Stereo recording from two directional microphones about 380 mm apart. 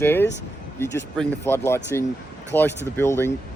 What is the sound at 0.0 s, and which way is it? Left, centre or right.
Speech, centre.